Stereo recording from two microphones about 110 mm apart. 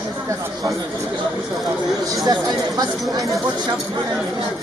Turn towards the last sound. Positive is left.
turn(degrees=-35)  # may be behind; listen again after turning